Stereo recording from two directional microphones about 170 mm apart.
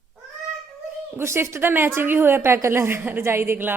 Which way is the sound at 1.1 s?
15° right (ahead or behind).